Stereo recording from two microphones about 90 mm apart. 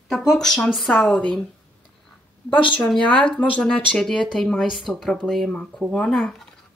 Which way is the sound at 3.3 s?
10° left (ahead or behind).